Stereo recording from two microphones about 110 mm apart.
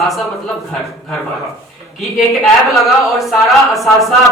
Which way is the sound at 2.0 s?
Centre (ahead or behind).